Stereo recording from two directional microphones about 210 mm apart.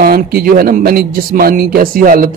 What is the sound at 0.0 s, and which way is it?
A man's voice, 45° right (ahead or behind).